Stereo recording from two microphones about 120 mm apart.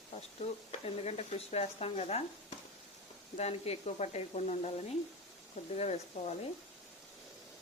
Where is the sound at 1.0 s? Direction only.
60° left (ahead or behind).